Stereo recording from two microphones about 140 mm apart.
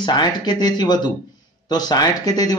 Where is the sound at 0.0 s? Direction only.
30° left (ahead or behind).